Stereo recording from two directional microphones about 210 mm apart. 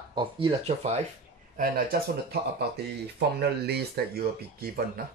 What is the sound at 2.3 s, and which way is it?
Speech, 50° right (ahead or behind).